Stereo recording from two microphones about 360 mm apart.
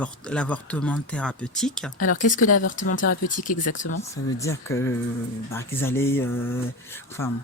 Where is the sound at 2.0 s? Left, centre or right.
Left.